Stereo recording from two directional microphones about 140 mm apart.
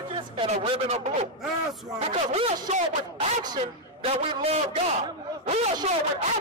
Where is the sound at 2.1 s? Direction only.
45° right (ahead or behind).